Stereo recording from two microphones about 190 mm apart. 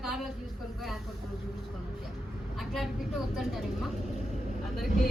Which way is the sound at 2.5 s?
Centre (ahead or behind).